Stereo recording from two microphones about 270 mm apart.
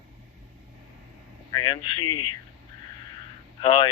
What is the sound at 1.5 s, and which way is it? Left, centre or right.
Speech, centre.